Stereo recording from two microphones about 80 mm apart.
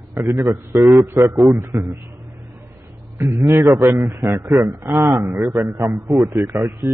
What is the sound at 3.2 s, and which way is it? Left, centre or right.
A man's voice, right.